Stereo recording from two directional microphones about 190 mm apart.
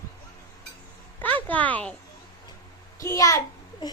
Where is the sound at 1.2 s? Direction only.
10° left (ahead or behind).